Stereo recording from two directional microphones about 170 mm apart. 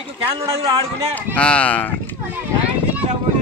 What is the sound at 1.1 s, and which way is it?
Speech, 5° left (ahead or behind).